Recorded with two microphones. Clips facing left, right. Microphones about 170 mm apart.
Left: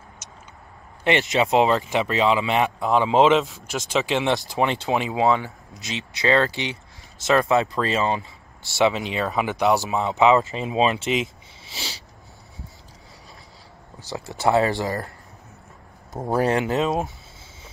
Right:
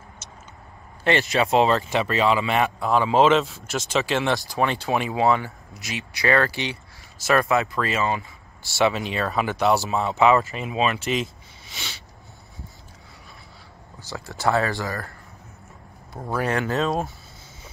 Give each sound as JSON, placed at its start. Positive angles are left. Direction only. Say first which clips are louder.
{"t": 0.2, "sound": "vehicle", "louder": "right 1 dB", "side_deg": 10}
{"t": 1.0, "sound": "speech", "louder": "left 1 dB", "side_deg": 20}
{"t": 14.1, "sound": "speech", "louder": "left 3 dB", "side_deg": 20}
{"t": 16.4, "sound": "speech", "louder": "even", "side_deg": 20}